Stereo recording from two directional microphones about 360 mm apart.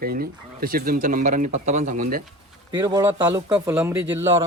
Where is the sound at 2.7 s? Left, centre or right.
Centre.